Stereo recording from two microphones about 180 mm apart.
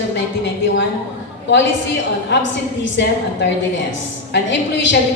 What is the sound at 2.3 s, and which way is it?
Speech, 85° left.